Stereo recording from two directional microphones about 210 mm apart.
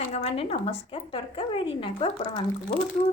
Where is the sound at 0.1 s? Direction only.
30° left (ahead or behind).